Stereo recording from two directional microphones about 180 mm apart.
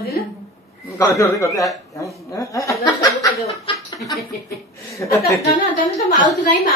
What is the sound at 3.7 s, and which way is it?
Chuckle, 30° left (ahead or behind).